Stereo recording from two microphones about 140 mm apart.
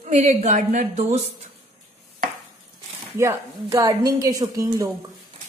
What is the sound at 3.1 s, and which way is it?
A woman's voice, 20° right (ahead or behind).